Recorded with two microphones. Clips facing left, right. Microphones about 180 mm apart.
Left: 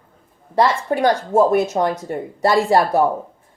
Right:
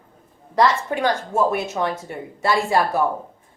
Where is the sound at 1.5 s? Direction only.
40° left (ahead or behind).